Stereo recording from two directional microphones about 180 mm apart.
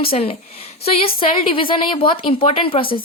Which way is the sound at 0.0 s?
30° left (ahead or behind).